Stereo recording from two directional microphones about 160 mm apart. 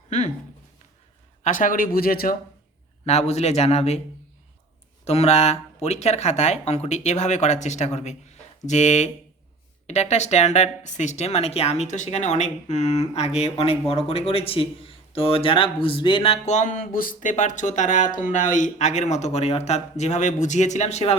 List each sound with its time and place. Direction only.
1.5 s speech: 55° left (ahead or behind)
3.1 s speech: 40° left (ahead or behind)
5.0 s speech: 40° left (ahead or behind)